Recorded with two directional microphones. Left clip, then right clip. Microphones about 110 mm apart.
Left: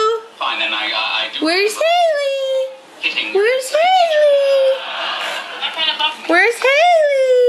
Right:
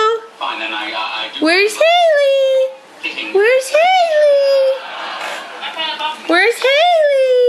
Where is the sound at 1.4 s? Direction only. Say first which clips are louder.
Right 5 dB; 10° right (ahead or behind).